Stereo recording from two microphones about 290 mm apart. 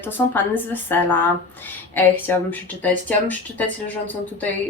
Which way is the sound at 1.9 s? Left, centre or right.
Centre.